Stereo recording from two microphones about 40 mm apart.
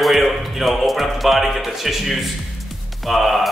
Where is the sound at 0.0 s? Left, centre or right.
Centre.